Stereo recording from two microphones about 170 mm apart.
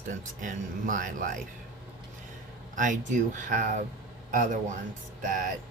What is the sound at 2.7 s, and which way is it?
Speech, 50° right (ahead or behind).